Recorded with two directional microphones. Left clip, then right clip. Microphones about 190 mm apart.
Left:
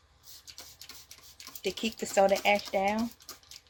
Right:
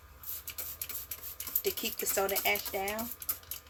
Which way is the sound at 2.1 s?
50° left (ahead or behind).